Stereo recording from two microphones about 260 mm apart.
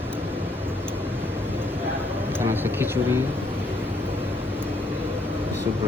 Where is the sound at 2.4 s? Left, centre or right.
Centre.